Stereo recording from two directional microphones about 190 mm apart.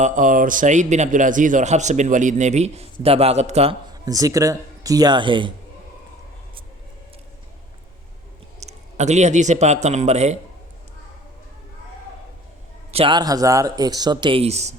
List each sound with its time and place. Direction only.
0.0 s a man's voice: 45° right (ahead or behind)
4.0 s speech: 20° right (ahead or behind)
8.6 s speech: 35° right (ahead or behind)
12.9 s speech: 30° right (ahead or behind)